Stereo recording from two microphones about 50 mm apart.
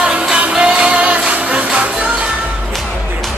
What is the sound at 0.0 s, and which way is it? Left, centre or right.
Music, centre.